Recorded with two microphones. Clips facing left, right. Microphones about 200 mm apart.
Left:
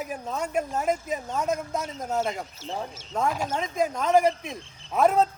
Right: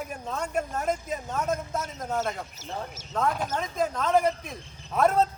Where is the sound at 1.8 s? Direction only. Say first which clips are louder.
Left 2 dB; 30° left (ahead or behind).